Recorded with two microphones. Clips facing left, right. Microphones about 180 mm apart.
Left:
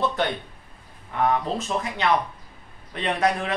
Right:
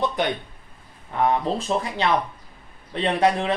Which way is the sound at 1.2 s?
30° right (ahead or behind).